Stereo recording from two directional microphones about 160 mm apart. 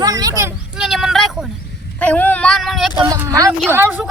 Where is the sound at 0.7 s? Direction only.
Centre (ahead or behind).